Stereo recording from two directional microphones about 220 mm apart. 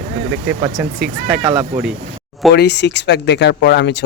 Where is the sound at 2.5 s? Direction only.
50° left (ahead or behind).